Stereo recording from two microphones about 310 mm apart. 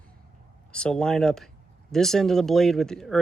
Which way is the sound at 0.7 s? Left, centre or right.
Centre.